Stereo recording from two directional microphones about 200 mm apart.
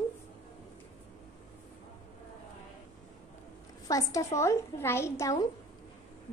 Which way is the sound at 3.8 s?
15° left (ahead or behind).